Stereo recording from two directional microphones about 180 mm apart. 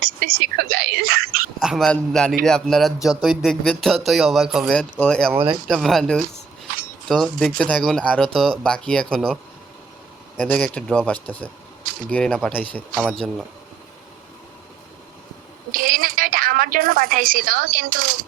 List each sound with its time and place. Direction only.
0.0 s speech: 55° right (ahead or behind)
1.6 s speech: centre (ahead or behind)
10.4 s speech: 5° left (ahead or behind)
15.7 s a woman's voice: 50° right (ahead or behind)